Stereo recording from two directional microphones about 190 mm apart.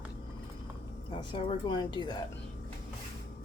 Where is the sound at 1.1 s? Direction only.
25° left (ahead or behind).